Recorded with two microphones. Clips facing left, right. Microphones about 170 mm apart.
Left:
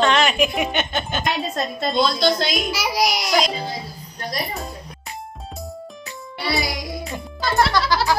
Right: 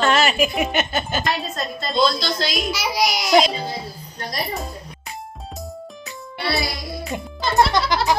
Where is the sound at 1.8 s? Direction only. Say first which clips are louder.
Even; 55° left (ahead or behind).